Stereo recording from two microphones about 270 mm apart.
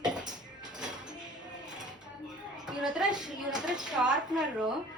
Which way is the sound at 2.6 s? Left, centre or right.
Centre.